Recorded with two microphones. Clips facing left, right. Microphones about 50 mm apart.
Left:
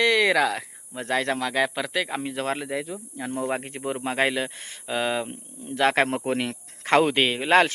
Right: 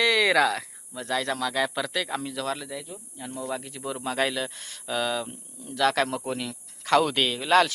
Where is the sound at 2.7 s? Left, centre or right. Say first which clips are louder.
Left 7 dB; left.